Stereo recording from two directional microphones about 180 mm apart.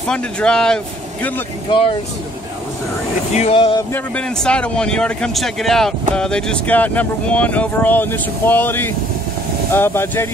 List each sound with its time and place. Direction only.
0.1 s speech: 5° left (ahead or behind)
1.7 s speech: 30° left (ahead or behind)
3.3 s speech: 35° left (ahead or behind)
3.9 s speech: 5° left (ahead or behind)